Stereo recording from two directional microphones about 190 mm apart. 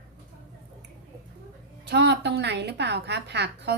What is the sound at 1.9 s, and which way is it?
Cutlery, 60° right (ahead or behind).